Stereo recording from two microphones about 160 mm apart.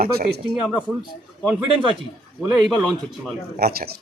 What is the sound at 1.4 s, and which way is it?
Speech, centre (ahead or behind).